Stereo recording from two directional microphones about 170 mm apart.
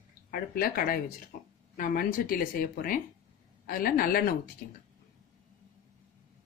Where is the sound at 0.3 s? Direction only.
60° left (ahead or behind).